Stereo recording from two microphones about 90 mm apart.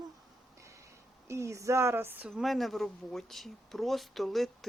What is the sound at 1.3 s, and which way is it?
Speech, 35° right (ahead or behind).